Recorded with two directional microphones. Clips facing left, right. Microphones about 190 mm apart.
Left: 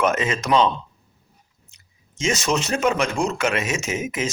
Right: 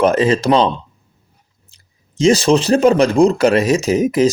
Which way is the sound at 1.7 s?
35° right (ahead or behind).